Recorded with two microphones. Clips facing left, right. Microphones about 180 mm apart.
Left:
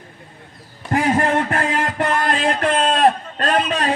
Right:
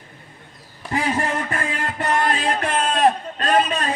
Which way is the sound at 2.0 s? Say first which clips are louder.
Right 1 dB; 55° left (ahead or behind).